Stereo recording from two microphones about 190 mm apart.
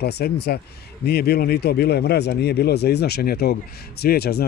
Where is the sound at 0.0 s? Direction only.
55° left (ahead or behind).